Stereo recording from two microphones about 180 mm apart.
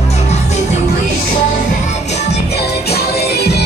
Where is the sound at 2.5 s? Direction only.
65° left (ahead or behind).